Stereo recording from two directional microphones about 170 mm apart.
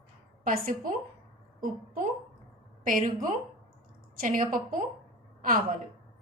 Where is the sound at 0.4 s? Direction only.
55° right (ahead or behind).